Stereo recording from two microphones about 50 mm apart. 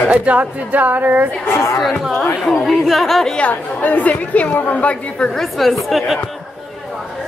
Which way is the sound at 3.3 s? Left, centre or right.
Left.